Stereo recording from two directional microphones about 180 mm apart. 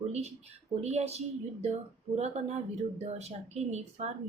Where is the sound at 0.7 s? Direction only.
35° right (ahead or behind).